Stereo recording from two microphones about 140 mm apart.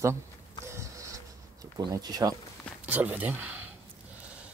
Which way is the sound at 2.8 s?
10° right (ahead or behind).